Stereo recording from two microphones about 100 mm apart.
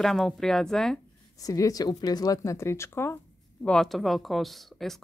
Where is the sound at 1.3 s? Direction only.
35° left (ahead or behind).